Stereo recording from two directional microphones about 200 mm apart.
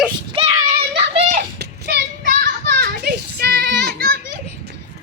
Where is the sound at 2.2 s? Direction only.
45° right (ahead or behind).